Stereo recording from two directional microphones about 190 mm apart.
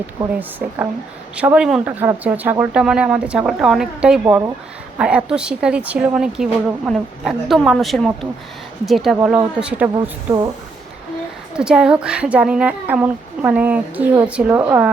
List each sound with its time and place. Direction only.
1.4 s speech: 5° right (ahead or behind)
9.9 s speech: 20° right (ahead or behind)
11.5 s speech: 5° right (ahead or behind)